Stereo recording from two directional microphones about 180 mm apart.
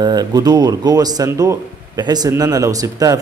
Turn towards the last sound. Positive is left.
turn(degrees=-20)  # may be behind; listen again after turning